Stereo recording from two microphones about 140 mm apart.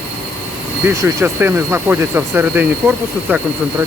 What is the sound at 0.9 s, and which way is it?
Speech, 15° right (ahead or behind).